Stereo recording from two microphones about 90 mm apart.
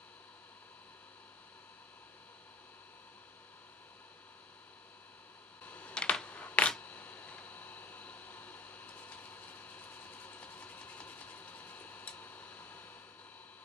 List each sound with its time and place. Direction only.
5.7 s camera: 15° left (ahead or behind)